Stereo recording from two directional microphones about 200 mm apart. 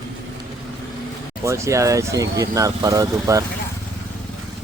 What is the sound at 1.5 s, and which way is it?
Speech, 15° right (ahead or behind).